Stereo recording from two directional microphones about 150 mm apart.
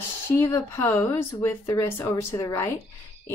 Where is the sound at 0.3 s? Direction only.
15° left (ahead or behind).